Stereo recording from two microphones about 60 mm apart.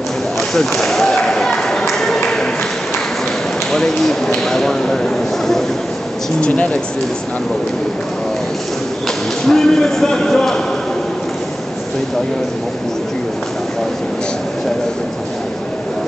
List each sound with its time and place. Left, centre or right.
0.6 s a sound: centre
3.7 s speech: centre
9.5 s speech: centre